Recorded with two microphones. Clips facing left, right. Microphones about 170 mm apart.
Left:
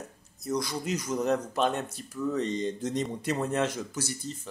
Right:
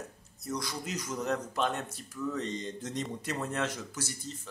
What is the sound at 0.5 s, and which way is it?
Speech, 20° left (ahead or behind).